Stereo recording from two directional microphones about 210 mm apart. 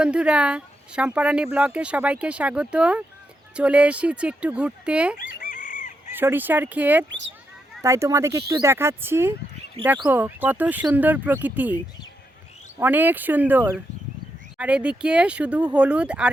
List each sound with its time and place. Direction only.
0.0 s speech: 5° right (ahead or behind)
5.2 s chicken: 40° left (ahead or behind)
6.1 s speech: 10° right (ahead or behind)
9.8 s speech: 25° right (ahead or behind)
10.1 s speech: 10° right (ahead or behind)
12.8 s speech: 10° right (ahead or behind)